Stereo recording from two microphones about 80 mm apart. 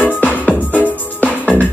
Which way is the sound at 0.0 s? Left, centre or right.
Centre.